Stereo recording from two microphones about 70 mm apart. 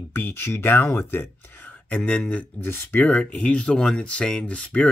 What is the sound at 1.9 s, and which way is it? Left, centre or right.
Speech, centre.